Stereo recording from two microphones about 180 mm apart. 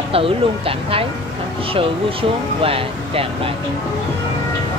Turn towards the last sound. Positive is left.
turn(degrees=-30)  # may be behind; listen again after turning